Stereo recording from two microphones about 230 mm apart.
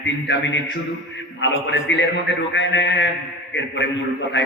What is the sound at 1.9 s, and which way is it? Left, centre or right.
A man's voice, left.